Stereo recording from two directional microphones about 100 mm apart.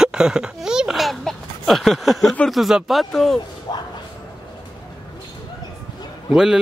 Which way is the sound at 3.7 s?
45° left (ahead or behind).